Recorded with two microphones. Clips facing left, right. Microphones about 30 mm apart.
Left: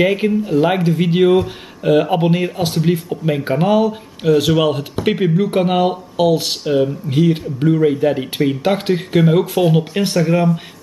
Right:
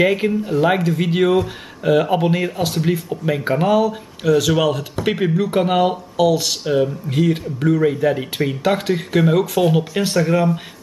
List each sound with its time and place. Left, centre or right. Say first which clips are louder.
0.0 s speech: left 1 dB; centre
3.8 s speech: left 2 dB; centre
5.0 s speech: left 3 dB; centre
6.1 s speech: left 1 dB; left
6.6 s speech: left 2 dB; centre